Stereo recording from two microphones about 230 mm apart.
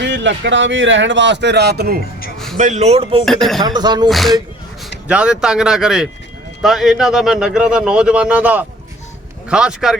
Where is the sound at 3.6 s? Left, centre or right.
Centre.